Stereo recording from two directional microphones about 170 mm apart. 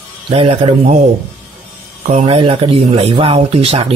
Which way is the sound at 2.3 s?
30° right (ahead or behind).